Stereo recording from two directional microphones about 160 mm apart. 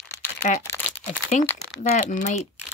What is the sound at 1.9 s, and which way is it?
Speech, 50° left (ahead or behind).